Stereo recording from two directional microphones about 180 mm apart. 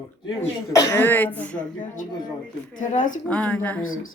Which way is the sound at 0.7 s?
20° left (ahead or behind).